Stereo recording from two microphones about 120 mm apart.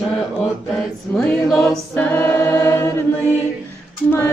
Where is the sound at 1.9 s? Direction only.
20° left (ahead or behind).